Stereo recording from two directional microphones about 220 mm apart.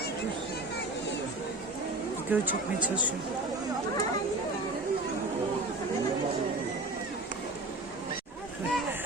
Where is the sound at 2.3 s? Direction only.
10° right (ahead or behind).